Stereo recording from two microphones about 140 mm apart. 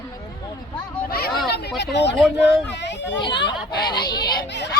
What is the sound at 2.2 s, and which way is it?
Speech, 10° right (ahead or behind).